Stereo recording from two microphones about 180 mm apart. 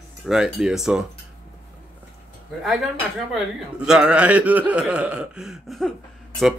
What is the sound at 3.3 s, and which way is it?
Speech, 5° right (ahead or behind).